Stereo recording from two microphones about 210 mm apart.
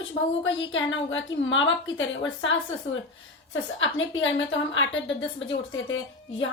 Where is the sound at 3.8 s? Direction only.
65° left (ahead or behind).